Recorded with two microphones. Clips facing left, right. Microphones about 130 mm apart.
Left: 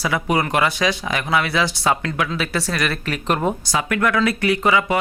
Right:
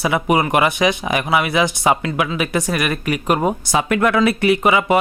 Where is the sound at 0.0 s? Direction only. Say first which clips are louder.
Right 3 dB; 20° right (ahead or behind).